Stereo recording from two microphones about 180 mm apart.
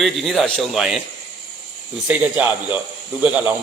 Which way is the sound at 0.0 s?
Centre (ahead or behind).